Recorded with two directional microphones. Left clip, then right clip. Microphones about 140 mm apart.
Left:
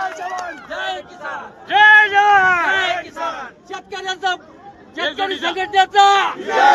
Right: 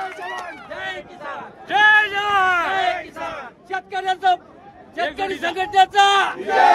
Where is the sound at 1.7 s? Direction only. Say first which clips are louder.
Left 5 dB; 15° right (ahead or behind).